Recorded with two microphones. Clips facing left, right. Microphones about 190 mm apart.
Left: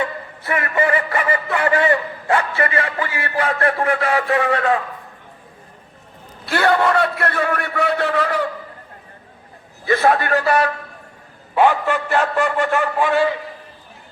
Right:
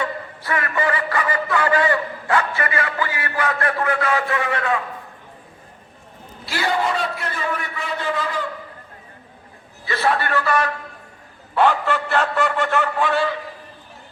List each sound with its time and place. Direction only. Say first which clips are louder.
0.0 s music: left 2 dB; 25° left (ahead or behind)
6.4 s a man's voice: left 5 dB; 60° left (ahead or behind)
9.8 s a man's voice: left 5 dB; 50° left (ahead or behind)
11.5 s a sound: left 2 dB; 10° left (ahead or behind)